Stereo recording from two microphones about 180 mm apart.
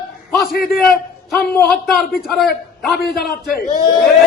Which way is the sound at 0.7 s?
Centre (ahead or behind).